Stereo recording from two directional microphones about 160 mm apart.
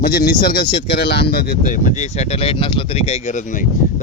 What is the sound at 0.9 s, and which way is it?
A man's voice, 90° left.